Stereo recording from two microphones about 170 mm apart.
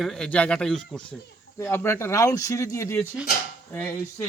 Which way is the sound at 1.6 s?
15° left (ahead or behind).